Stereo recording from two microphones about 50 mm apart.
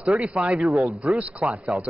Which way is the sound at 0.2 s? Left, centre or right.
Right.